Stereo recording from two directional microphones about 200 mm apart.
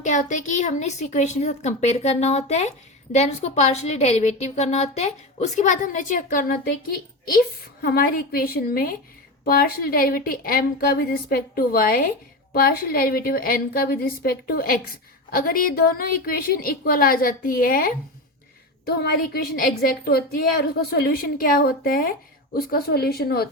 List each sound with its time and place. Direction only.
0.0 s a woman's voice: 40° left (ahead or behind)